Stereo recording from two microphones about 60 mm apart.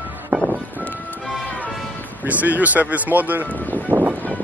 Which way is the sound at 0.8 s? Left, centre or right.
Left.